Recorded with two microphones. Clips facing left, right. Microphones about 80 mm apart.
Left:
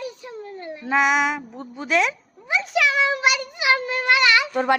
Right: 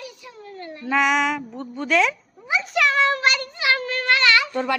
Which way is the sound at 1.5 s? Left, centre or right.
Centre.